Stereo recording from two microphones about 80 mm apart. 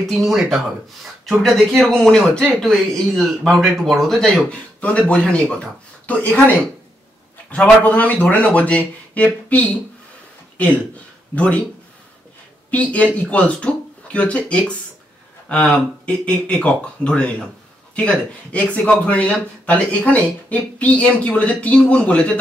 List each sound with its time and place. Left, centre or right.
0.0 s a man's voice: centre
7.5 s a man's voice: centre
11.3 s a man's voice: centre
12.7 s a man's voice: centre